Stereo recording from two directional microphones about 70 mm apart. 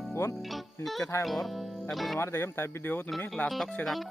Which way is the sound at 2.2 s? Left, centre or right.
Left.